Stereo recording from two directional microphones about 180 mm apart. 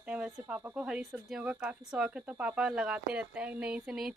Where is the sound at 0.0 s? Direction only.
5° right (ahead or behind).